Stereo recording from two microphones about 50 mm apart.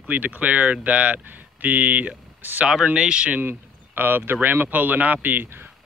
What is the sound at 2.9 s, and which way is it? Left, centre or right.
Speech, centre.